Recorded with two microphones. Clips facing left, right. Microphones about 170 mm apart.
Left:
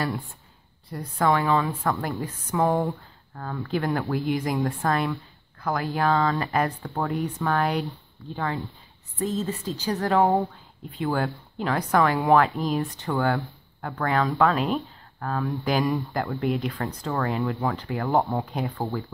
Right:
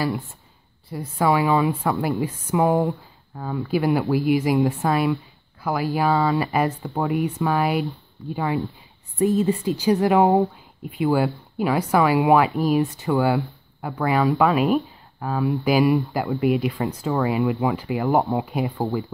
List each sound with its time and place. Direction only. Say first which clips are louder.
0.8 s speech: right 2 dB; 5° right (ahead or behind)
2.7 s speech: right 4 dB; centre (ahead or behind)
3.3 s speech: right 5 dB; 15° right (ahead or behind)
18.1 s speech: right 2 dB; 15° right (ahead or behind)